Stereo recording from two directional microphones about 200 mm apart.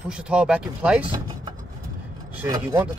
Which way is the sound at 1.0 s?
20° right (ahead or behind).